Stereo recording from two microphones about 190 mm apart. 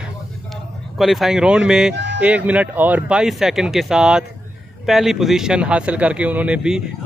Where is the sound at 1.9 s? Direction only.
65° right (ahead or behind).